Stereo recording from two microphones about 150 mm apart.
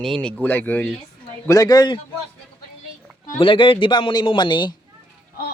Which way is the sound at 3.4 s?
35° left (ahead or behind).